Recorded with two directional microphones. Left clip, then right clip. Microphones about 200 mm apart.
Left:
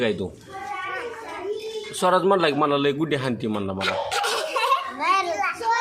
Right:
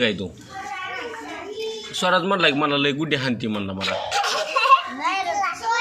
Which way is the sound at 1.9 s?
25° left (ahead or behind).